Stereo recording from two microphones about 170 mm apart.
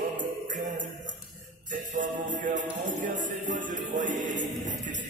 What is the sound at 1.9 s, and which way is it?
Music, 50° right (ahead or behind).